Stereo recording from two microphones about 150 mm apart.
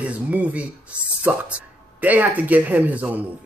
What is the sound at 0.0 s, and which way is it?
Speech, 10° right (ahead or behind).